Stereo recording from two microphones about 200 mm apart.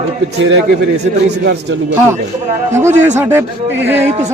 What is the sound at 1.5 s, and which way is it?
Speech, 60° right (ahead or behind).